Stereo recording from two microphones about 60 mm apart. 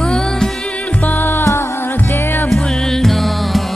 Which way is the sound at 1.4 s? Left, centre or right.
Left.